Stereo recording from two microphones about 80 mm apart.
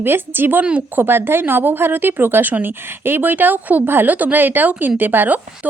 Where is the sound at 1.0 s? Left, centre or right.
Right.